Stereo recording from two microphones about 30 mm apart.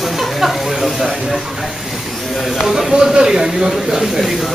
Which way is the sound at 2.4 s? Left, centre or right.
Centre.